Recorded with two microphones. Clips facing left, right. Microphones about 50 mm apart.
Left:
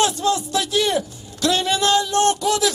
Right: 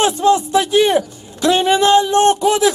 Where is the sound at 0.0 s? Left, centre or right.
Right.